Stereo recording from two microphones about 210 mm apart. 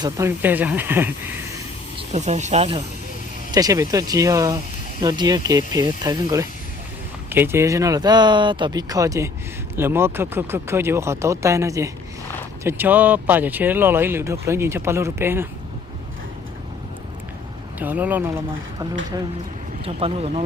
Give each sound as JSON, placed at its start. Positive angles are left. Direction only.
{"t": 0.0, "sound": "speech", "side_deg": -15}
{"t": 2.0, "sound": "speech", "side_deg": -30}
{"t": 3.5, "sound": "speech", "side_deg": -15}
{"t": 17.7, "sound": "speech", "side_deg": -5}
{"t": 19.8, "sound": "speech", "side_deg": -25}